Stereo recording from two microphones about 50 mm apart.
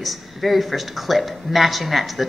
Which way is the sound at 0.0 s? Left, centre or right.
Centre.